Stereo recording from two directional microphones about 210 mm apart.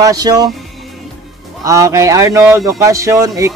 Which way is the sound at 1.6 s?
15° right (ahead or behind).